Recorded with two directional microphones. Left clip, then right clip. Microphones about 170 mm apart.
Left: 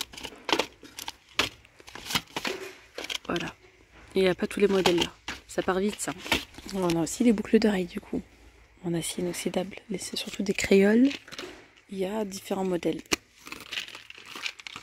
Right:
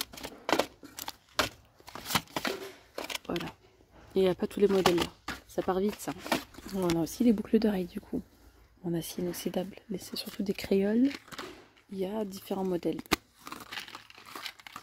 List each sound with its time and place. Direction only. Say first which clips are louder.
0.2 s keys jangling: left 2 dB; 15° right (ahead or behind)
3.3 s speech: left 4 dB; 5° left (ahead or behind)
4.8 s speech: left 2 dB; 25° right (ahead or behind)
5.5 s speech: left 3 dB; 5° left (ahead or behind)
11.1 s a sound: left 4 dB; 25° right (ahead or behind)
11.9 s speech: left 4 dB; 5° left (ahead or behind)
13.1 s a sound: left 1 dB; 15° right (ahead or behind)
13.7 s crumpling: left 8 dB; 30° right (ahead or behind)